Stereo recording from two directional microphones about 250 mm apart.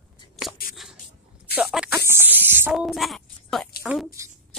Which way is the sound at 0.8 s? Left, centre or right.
Centre.